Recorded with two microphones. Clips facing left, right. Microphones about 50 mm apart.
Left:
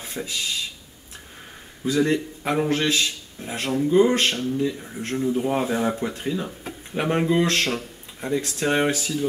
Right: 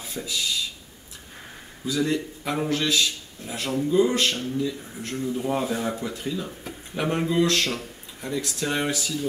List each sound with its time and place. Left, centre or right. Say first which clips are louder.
0.0 s speech: even; left
1.9 s speech: left 4 dB; left
2.7 s speech: left 1 dB; left